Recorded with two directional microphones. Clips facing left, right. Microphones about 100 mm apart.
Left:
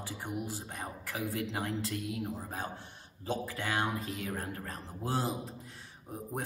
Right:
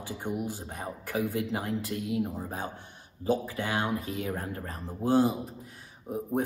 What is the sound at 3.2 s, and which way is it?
Speech, 20° right (ahead or behind).